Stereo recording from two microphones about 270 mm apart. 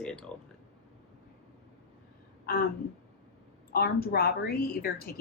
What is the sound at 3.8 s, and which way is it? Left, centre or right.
Speech, left.